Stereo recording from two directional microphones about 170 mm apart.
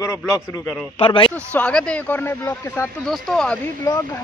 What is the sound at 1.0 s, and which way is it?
Speech, 30° left (ahead or behind).